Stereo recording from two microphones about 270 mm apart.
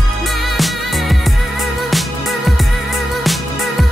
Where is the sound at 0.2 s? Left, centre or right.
Centre.